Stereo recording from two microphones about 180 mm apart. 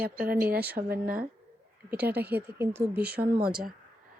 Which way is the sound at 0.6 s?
10° right (ahead or behind).